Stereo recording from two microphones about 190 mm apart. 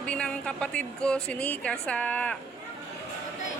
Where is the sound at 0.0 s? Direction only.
5° left (ahead or behind).